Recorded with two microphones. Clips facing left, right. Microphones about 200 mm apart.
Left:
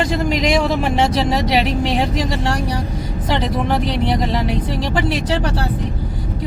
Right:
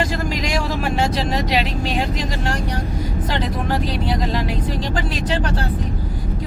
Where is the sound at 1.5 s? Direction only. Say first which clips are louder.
Left 4 dB; 30° left (ahead or behind).